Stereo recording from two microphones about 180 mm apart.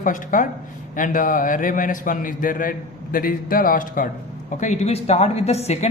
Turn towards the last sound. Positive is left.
turn(degrees=35)  # may be behind; listen again after turning